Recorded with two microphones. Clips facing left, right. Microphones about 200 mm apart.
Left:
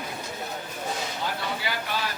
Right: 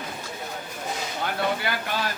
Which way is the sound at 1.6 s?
55° right (ahead or behind).